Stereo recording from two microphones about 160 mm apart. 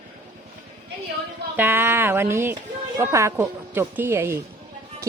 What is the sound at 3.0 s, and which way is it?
Speech, 20° right (ahead or behind).